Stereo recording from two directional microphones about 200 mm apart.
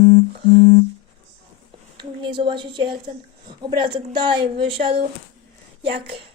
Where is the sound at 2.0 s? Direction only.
25° right (ahead or behind).